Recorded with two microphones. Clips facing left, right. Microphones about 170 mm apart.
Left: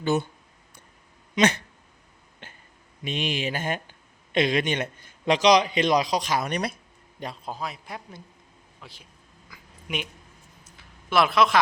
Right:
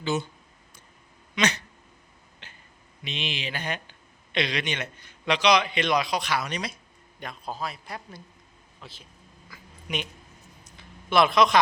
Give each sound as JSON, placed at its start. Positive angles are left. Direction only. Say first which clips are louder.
{"t": 0.0, "sound": "speech", "louder": "left 4 dB", "side_deg": 55}
{"t": 1.4, "sound": "speech", "louder": "left 5 dB", "side_deg": 50}
{"t": 2.4, "sound": "a sound", "louder": "left 5 dB", "side_deg": 50}
{"t": 3.0, "sound": "a man's voice", "louder": "left 6 dB", "side_deg": 45}
{"t": 6.5, "sound": "speech", "louder": "left 5 dB", "side_deg": 55}
{"t": 7.4, "sound": "speech", "louder": "right 4 dB", "side_deg": 15}
{"t": 9.5, "sound": "a sound", "louder": "even", "side_deg": 5}